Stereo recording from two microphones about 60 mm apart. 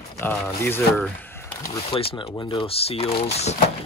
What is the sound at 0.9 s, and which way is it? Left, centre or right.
Speech, left.